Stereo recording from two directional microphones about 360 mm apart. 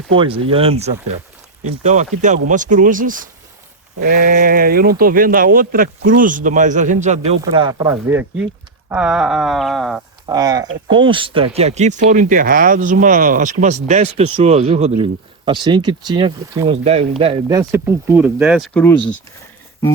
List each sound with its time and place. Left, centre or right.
0.2 s speech: centre
10.2 s speech: centre